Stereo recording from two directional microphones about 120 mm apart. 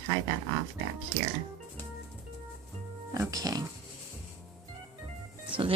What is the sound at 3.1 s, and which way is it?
Pig, 30° right (ahead or behind).